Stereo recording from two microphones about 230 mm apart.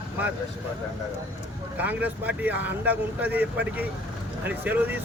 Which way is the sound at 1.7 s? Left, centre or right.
Centre.